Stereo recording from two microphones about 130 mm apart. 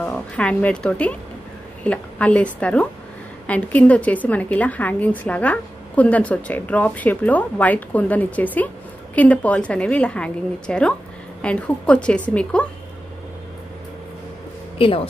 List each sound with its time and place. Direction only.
0.0 s a woman's voice: 10° left (ahead or behind)
14.8 s speech: 45° left (ahead or behind)